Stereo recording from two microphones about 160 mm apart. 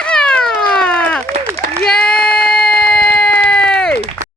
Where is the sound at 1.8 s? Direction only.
5° left (ahead or behind).